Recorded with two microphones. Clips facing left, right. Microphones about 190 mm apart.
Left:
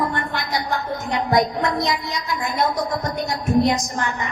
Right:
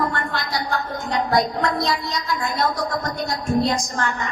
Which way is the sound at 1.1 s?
20° left (ahead or behind).